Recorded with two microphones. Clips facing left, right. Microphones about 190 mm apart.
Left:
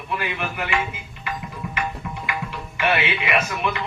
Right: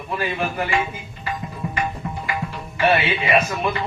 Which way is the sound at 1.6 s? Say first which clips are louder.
Right 3 dB; 30° right (ahead or behind).